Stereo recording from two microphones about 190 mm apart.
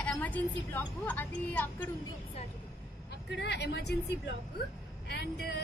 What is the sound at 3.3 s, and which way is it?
A woman's voice, 65° left (ahead or behind).